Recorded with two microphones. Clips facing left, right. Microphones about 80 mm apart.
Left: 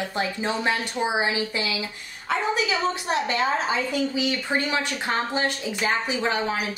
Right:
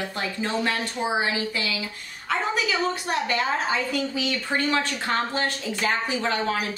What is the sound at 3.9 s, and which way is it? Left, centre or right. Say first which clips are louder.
A woman's voice: left 2 dB; centre.